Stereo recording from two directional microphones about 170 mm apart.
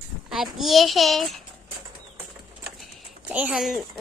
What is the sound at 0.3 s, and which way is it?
A child's voice, centre (ahead or behind).